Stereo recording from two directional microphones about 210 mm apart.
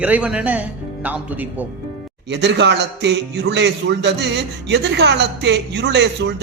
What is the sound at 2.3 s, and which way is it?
A man's voice, 55° right (ahead or behind).